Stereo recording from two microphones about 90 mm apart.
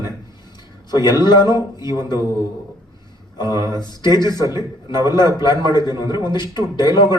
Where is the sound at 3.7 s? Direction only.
55° left (ahead or behind).